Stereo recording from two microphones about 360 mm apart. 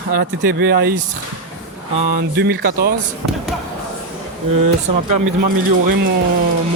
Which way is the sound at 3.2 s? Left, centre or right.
Right.